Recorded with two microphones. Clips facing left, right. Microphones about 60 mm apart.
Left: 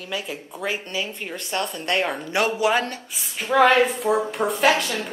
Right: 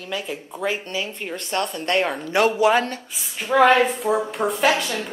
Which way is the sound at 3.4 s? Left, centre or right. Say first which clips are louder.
Right 1 dB; centre.